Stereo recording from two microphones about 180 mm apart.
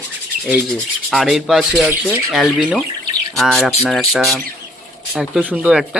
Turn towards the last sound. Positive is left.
turn(degrees=-5)  # may be behind; listen again after turning